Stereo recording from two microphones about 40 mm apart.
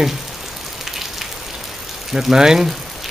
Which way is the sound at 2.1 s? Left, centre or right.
Centre.